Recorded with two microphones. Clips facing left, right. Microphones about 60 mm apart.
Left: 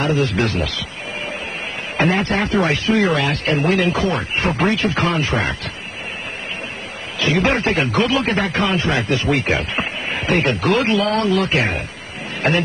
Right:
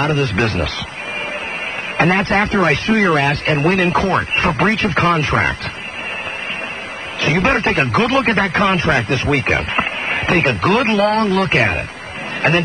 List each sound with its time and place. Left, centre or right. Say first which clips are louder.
0.0 s a man's voice: right 1 dB; right
2.0 s a man's voice: right 3 dB; right
7.2 s a man's voice: right 2 dB; right